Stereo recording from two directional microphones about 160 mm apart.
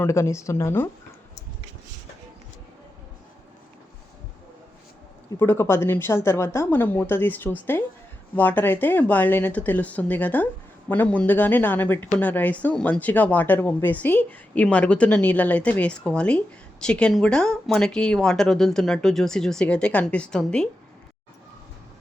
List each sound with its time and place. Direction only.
0.0 s speech: 15° left (ahead or behind)
5.4 s speech: 15° left (ahead or behind)